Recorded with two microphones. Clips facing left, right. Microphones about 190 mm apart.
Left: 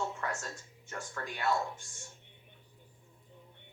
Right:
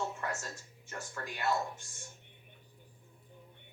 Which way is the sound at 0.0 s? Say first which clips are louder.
Left 1 dB; 5° right (ahead or behind).